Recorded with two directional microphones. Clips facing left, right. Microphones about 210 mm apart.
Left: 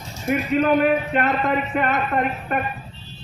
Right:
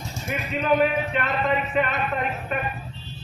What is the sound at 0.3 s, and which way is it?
A man's voice, 55° left (ahead or behind).